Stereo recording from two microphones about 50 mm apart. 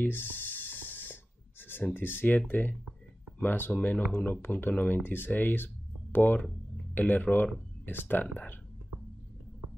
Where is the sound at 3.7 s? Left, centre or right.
Left.